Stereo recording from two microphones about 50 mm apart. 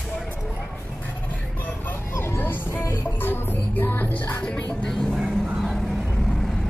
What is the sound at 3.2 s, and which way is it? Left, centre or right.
Music, left.